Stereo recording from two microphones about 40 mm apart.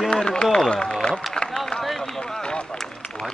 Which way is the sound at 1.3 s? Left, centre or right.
Centre.